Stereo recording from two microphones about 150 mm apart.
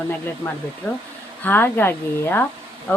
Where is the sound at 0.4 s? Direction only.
20° left (ahead or behind).